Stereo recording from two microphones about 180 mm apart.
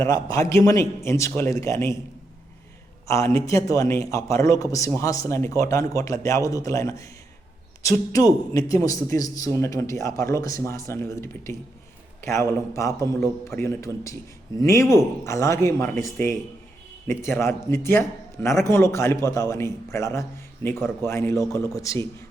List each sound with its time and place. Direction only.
0.0 s a man's voice: 20° left (ahead or behind)
3.1 s a man's voice: 15° left (ahead or behind)